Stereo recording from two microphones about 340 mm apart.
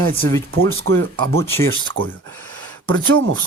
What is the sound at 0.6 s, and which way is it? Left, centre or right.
Speech, right.